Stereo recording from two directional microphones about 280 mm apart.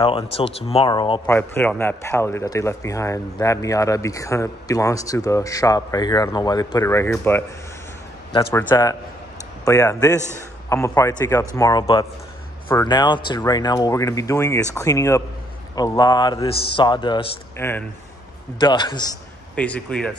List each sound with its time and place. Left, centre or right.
0.0 s a man's voice: centre